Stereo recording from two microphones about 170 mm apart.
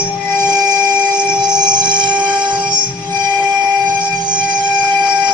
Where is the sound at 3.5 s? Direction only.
25° right (ahead or behind).